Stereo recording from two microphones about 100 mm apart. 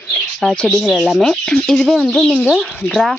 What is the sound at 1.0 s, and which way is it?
Speech, centre (ahead or behind).